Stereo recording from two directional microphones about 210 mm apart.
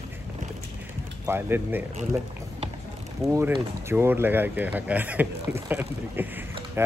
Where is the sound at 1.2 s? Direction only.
10° right (ahead or behind).